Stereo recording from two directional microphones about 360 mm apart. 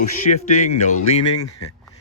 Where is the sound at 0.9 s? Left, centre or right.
Left.